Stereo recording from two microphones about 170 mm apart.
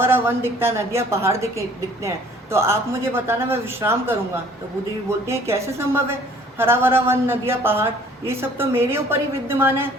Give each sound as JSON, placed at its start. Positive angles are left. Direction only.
{"t": 0.0, "sound": "a woman's voice", "side_deg": -15}
{"t": 5.2, "sound": "a woman's voice", "side_deg": -15}